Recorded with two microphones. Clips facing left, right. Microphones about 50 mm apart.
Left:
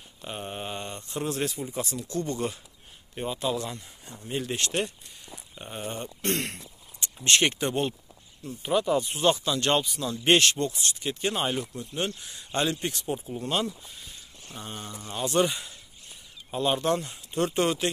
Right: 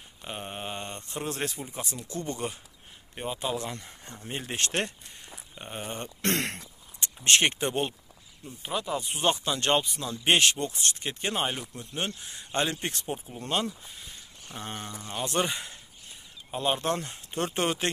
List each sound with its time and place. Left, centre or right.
0.2 s mantra: centre
0.7 s speech: right
1.7 s speech: right
5.5 s speech: centre
5.9 s speech: right
7.0 s speech: right
8.6 s speech: centre
9.1 s speech: right
10.0 s speech: centre
10.7 s speech: right
11.1 s speech: right
16.4 s speech: centre
16.8 s speech: right